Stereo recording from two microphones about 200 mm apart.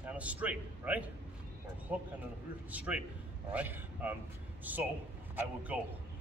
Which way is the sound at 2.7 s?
5° right (ahead or behind).